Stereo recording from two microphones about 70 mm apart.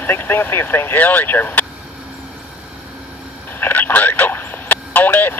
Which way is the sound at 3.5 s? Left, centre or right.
Left.